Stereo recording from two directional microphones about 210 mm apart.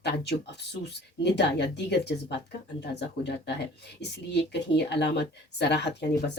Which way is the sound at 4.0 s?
55° left (ahead or behind).